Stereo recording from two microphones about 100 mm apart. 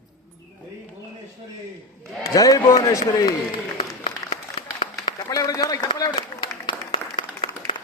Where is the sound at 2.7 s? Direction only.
35° left (ahead or behind).